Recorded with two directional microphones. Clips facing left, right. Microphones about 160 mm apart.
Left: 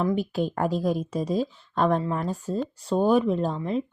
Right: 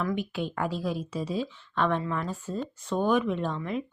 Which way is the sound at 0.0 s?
35° left (ahead or behind).